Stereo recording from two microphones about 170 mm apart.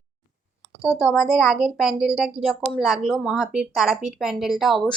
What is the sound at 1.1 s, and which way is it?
A woman's voice, centre (ahead or behind).